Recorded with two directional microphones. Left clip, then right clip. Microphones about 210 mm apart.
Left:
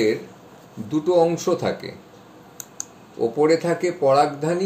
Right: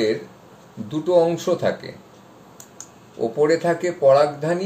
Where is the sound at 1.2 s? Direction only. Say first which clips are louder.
Even; 35° left (ahead or behind).